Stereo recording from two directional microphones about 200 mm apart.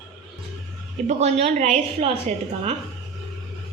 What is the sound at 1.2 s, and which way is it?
Speech, 35° right (ahead or behind).